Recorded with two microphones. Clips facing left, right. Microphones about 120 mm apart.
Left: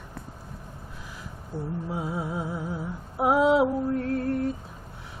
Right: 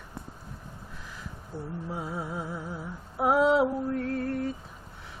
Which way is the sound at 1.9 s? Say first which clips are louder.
Left 3 dB; 10° left (ahead or behind).